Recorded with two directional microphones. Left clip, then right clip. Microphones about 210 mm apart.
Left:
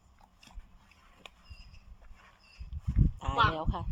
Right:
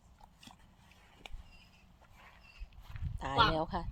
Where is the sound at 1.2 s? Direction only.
10° left (ahead or behind).